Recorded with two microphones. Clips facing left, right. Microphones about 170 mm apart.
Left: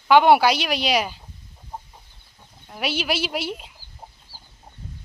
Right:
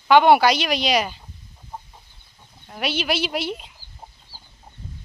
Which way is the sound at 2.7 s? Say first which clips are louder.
Right 1 dB; 10° left (ahead or behind).